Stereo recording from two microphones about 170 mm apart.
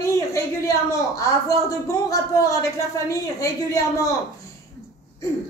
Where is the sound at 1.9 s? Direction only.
20° left (ahead or behind).